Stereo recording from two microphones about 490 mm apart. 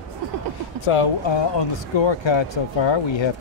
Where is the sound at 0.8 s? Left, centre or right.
Left.